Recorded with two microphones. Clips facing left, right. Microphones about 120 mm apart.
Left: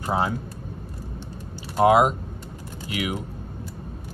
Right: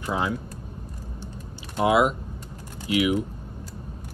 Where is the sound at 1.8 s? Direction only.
40° left (ahead or behind).